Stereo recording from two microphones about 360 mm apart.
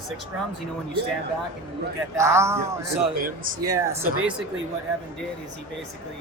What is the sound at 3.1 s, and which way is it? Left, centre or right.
Speech, right.